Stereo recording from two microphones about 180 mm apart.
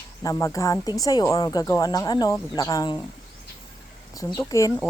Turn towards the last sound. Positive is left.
turn(degrees=15)  # may be behind; listen again after turning